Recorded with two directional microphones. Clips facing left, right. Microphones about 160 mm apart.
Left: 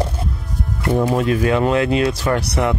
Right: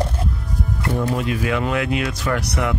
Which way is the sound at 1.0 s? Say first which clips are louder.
Left 6 dB; 40° left (ahead or behind).